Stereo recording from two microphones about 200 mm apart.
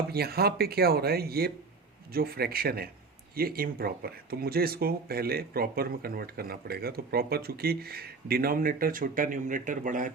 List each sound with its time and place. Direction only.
0.1 s speech: 50° right (ahead or behind)